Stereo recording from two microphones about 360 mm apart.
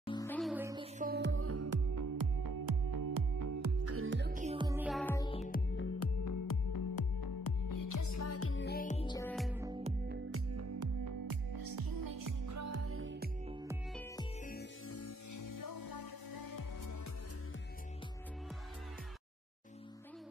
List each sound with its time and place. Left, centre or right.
0.0 s music: centre
0.9 s music: right
3.8 s music: right; by 5.6 s centre
5.8 s music: left
6.2 s music: left; by 9.9 s centre
10.0 s music: right
10.5 s music: right
13.5 s music: centre
14.4 s music: left
14.9 s music: left